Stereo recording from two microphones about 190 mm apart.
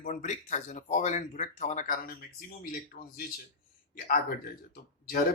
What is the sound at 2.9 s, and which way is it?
Speech, 55° left (ahead or behind).